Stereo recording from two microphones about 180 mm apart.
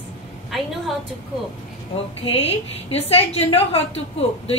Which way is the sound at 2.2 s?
35° left (ahead or behind).